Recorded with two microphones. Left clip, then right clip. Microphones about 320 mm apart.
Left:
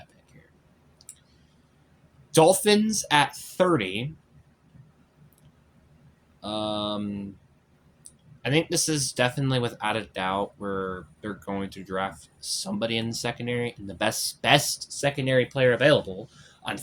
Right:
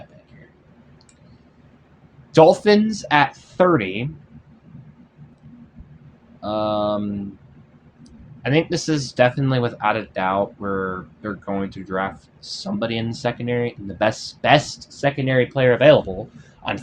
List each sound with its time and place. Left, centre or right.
2.3 s speech: left
6.4 s speech: left
8.0 s speech: left
16.6 s speech: left